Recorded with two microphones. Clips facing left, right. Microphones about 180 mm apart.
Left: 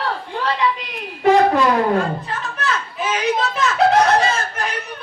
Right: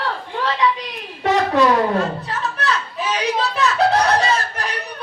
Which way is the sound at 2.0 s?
35° right (ahead or behind).